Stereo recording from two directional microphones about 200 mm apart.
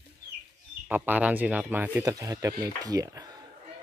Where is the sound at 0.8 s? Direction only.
10° right (ahead or behind).